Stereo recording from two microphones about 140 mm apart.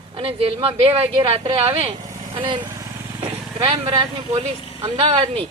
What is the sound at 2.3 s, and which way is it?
Speech, 35° right (ahead or behind).